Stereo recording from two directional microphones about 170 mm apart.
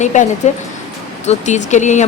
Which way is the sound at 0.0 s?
45° left (ahead or behind).